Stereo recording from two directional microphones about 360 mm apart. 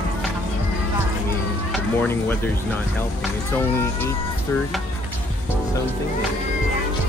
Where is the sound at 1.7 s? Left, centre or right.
Centre.